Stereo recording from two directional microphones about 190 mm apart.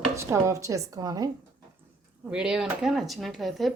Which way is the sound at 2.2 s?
5° right (ahead or behind).